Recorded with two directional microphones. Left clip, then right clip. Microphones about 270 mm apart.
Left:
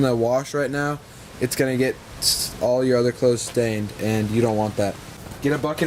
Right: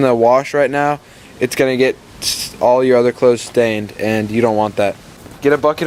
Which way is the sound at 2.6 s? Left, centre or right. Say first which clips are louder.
Right 9 dB; right.